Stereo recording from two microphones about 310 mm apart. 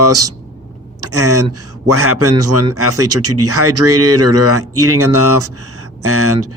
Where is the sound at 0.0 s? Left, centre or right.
Right.